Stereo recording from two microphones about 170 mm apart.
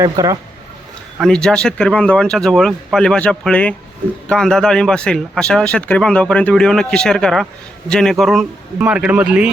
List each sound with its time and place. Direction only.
0.0 s speech: 20° right (ahead or behind)
1.2 s a man's voice: 5° left (ahead or behind)